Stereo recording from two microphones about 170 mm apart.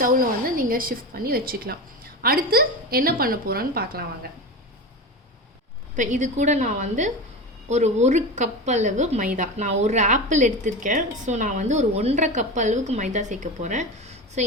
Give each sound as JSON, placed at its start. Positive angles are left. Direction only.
{"t": 0.0, "sound": "a woman's voice", "side_deg": -55}
{"t": 6.0, "sound": "a woman's voice", "side_deg": -45}